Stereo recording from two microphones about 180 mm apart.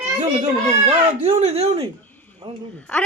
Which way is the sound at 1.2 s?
35° right (ahead or behind).